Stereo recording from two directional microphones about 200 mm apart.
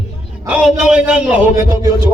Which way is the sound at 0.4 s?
5° right (ahead or behind).